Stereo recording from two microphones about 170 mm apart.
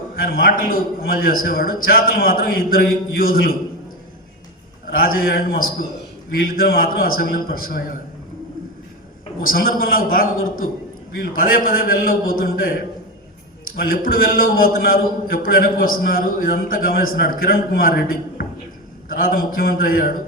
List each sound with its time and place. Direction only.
0.2 s a man's voice: 60° left (ahead or behind)
4.9 s a man's voice: 60° left (ahead or behind)
9.4 s a man's voice: 60° left (ahead or behind)
13.7 s a man's voice: 60° left (ahead or behind)